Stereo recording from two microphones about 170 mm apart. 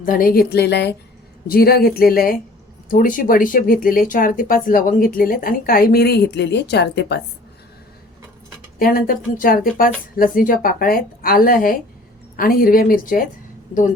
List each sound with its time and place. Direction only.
0.0 s a woman's voice: 55° left (ahead or behind); by 0.9 s 75° left (ahead or behind)
1.5 s speech: 60° left (ahead or behind); by 7.2 s 85° left
8.8 s speech: 55° left (ahead or behind)